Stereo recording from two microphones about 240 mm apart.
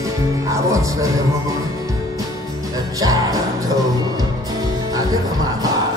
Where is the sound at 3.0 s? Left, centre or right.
Centre.